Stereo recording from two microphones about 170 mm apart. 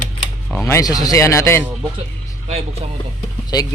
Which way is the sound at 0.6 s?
20° left (ahead or behind).